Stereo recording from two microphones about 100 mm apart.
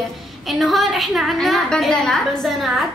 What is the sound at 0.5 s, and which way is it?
A woman's voice, centre (ahead or behind).